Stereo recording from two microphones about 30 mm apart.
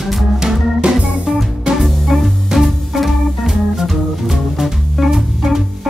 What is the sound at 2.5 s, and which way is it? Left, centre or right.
Music, centre.